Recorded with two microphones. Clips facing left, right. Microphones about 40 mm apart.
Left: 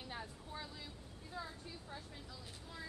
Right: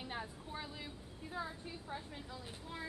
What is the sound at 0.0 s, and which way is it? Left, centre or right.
Vehicle, right.